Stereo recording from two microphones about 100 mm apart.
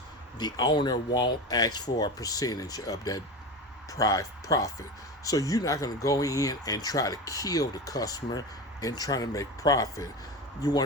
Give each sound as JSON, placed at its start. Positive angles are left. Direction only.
{"t": 0.3, "sound": "speech", "side_deg": 40}